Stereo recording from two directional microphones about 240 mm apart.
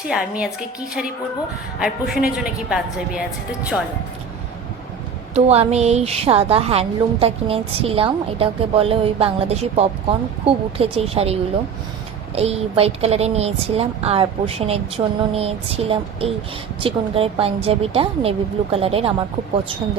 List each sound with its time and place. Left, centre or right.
0.1 s a woman's voice: centre
1.8 s a woman's voice: centre
5.3 s a woman's voice: right